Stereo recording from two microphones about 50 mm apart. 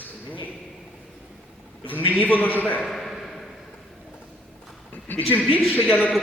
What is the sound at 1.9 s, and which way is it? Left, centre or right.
Speech, left.